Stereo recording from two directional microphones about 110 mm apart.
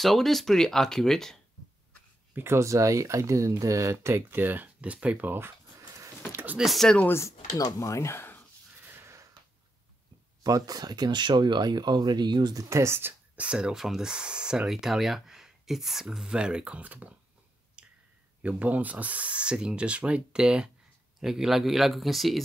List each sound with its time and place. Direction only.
0.0 s speech: centre (ahead or behind)
2.3 s speech: 25° right (ahead or behind)
6.3 s a sound: 15° right (ahead or behind)
6.6 s speech: centre (ahead or behind)
7.1 s speech: 25° left (ahead or behind)
8.7 s snort: 20° right (ahead or behind)
10.4 s speech: 35° right (ahead or behind)
12.6 s speech: 25° right (ahead or behind)
13.4 s speech: 10° right (ahead or behind)
17.8 s a sound: 10° right (ahead or behind)
18.4 s speech: 15° right (ahead or behind)